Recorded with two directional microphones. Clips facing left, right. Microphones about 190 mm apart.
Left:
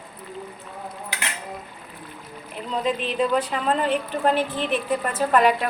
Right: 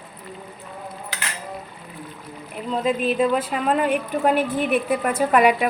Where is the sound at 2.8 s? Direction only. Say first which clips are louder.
Right 4 dB; 5° right (ahead or behind).